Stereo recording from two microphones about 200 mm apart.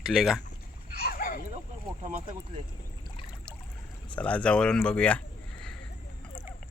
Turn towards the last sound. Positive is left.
turn(degrees=5)  # may be behind; listen again after turning